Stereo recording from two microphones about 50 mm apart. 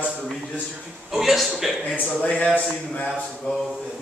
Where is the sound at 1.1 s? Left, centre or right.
Centre.